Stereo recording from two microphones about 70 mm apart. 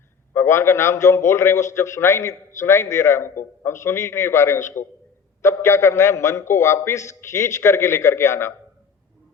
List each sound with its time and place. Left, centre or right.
0.3 s a man's voice: left